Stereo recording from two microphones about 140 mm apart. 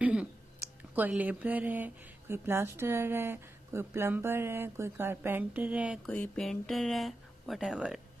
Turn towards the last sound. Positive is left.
turn(degrees=-5)  # may be behind; listen again after turning